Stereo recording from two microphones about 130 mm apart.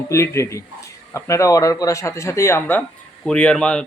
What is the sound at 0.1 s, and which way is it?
Speech, 20° left (ahead or behind).